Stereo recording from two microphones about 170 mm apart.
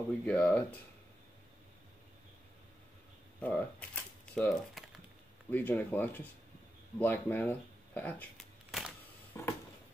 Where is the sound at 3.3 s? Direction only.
5° left (ahead or behind).